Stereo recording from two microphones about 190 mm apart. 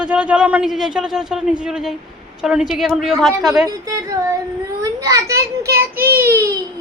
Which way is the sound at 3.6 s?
20° right (ahead or behind).